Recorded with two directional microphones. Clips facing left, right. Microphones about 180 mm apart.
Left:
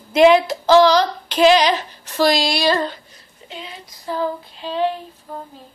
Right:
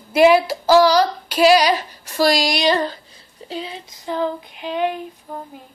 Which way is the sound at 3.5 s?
30° right (ahead or behind).